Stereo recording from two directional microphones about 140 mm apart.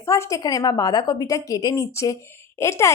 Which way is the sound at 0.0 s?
20° left (ahead or behind).